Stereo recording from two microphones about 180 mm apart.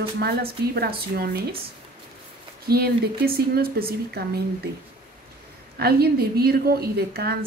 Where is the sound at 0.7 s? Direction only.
55° right (ahead or behind).